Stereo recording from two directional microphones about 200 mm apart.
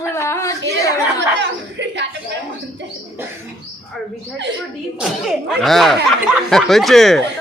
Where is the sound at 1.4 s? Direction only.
60° right (ahead or behind).